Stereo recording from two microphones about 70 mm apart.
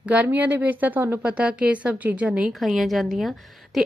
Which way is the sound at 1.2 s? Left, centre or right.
Centre.